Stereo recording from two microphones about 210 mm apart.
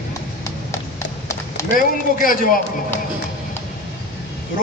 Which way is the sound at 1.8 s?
40° left (ahead or behind).